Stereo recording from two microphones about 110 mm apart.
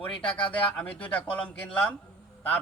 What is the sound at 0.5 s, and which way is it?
A man's voice, 10° left (ahead or behind).